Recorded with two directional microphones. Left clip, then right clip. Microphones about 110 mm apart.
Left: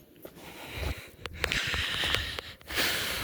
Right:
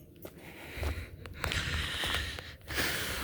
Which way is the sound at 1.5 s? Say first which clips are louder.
Left 5 dB; 25° right (ahead or behind).